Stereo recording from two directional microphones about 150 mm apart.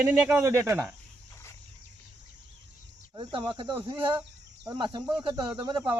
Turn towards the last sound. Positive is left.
turn(degrees=-30)  # may be behind; listen again after turning